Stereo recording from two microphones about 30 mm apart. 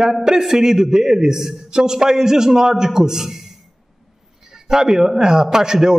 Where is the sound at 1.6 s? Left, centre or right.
Right.